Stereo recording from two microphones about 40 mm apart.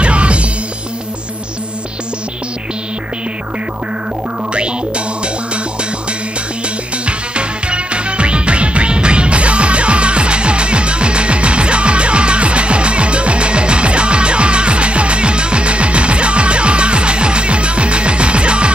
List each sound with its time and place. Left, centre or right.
0.0 s music: right
4.6 s music: right
7.1 s music: right